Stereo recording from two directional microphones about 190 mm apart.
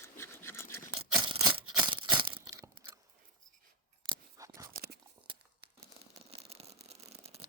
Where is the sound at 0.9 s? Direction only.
25° right (ahead or behind).